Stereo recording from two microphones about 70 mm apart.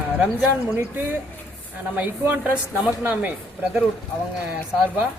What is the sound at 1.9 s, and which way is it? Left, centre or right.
A woman's voice, right.